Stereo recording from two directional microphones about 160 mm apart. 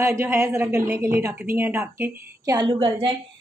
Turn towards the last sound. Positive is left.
turn(degrees=-30)  # may be behind; listen again after turning